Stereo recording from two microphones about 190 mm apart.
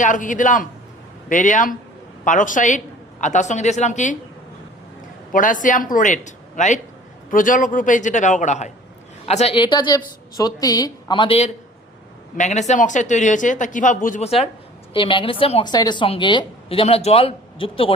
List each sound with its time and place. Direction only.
0.0 s speech: 40° left (ahead or behind)
5.3 s a woman's voice: 45° left (ahead or behind); by 17.9 s 30° left (ahead or behind)